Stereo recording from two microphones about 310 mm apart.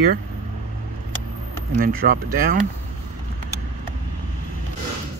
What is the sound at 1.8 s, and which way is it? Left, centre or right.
Speech, right.